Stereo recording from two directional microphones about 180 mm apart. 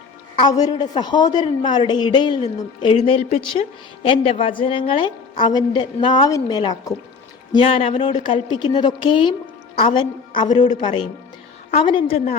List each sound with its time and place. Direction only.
0.3 s a woman's voice: 20° left (ahead or behind)